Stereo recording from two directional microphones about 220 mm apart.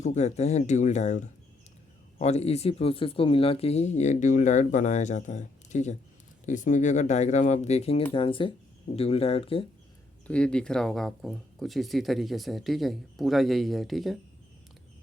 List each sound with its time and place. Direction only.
0.0 s speech: 30° left (ahead or behind)
10.2 s speech: 5° left (ahead or behind)